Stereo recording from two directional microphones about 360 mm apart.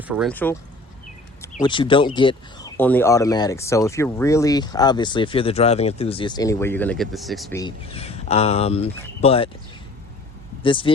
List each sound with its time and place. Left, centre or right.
0.1 s speech: centre
1.5 s speech: centre
7.6 s speech: centre
10.6 s speech: centre